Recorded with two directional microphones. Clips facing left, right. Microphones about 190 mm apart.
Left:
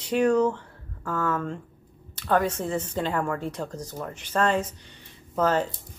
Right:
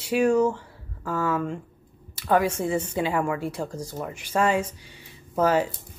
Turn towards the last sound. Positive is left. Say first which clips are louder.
# right 2 dB
turn(degrees=-10)  # may be behind; listen again after turning